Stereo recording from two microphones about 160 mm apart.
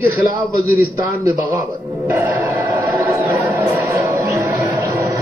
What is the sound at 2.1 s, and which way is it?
Choir, 15° right (ahead or behind).